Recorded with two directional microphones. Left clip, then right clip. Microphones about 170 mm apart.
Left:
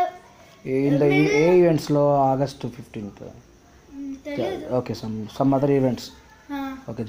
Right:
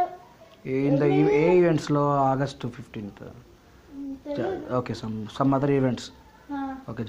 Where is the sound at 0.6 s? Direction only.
25° left (ahead or behind).